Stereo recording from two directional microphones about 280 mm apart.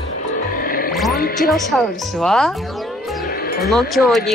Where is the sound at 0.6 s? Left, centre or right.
Left.